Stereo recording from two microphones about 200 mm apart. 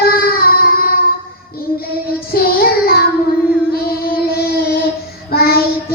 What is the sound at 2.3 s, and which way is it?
Child singing, 50° left (ahead or behind).